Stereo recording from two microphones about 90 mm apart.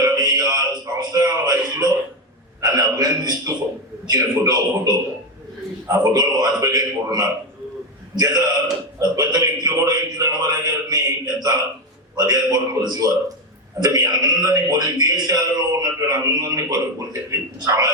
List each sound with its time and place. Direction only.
0.0 s music: 45° right (ahead or behind)
2.6 s a sound: 40° right (ahead or behind)
4.0 s a man's voice: 45° right (ahead or behind)